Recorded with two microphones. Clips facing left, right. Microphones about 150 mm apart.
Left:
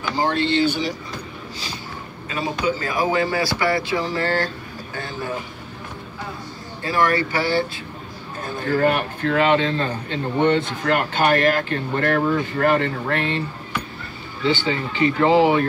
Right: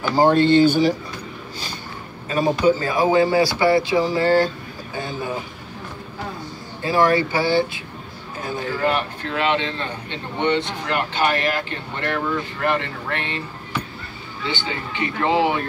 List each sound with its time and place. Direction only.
0.1 s speech: 45° right (ahead or behind)
2.2 s speech: 45° right (ahead or behind)
2.8 s speech: 25° right (ahead or behind)
4.0 s speech: 15° right (ahead or behind)
6.8 s speech: 25° right (ahead or behind)
8.7 s speech: 50° left (ahead or behind)
14.4 s speech: 40° left (ahead or behind)